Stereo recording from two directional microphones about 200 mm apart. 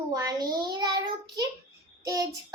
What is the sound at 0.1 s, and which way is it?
Child singing, 15° right (ahead or behind).